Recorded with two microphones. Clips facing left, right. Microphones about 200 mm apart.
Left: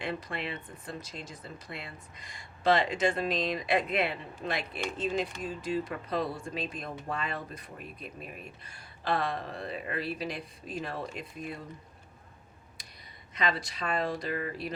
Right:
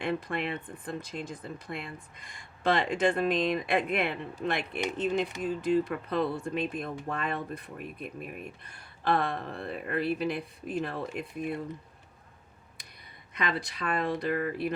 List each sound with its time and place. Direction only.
0.0 s speech: 55° right (ahead or behind)
13.3 s speech: 55° right (ahead or behind)